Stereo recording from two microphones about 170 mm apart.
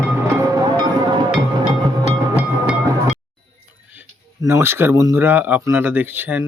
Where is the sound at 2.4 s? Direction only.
5° right (ahead or behind).